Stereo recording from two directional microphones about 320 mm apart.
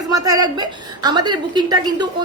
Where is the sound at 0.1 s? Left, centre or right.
Centre.